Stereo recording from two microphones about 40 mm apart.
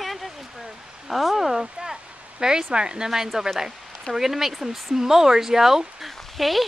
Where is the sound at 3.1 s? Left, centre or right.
Centre.